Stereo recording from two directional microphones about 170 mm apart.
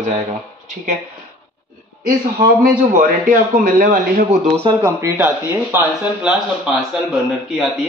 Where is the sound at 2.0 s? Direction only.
60° right (ahead or behind).